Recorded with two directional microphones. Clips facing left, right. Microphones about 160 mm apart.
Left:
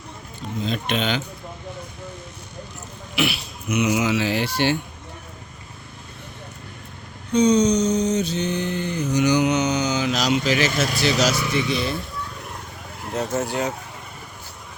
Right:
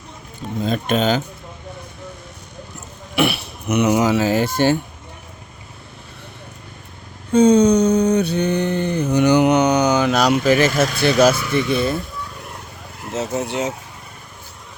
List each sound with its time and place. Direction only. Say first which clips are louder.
0.6 s speech: right 6 dB; 45° right (ahead or behind)
3.2 s speech: right 5 dB; 55° right (ahead or behind)
7.3 s a sound: right 5 dB; 50° right (ahead or behind)
11.5 s speech: right 5 dB; 50° right (ahead or behind)
13.5 s speech: right 2 dB; 20° right (ahead or behind)